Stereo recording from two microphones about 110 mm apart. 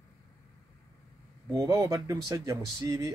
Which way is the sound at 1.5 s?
25° right (ahead or behind).